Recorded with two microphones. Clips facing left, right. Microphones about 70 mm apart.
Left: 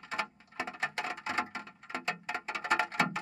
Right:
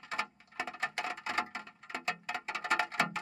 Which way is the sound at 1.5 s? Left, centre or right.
Left.